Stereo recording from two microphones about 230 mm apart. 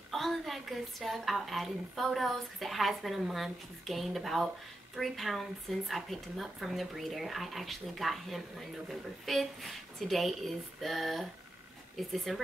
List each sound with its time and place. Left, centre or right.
0.1 s a woman's voice: centre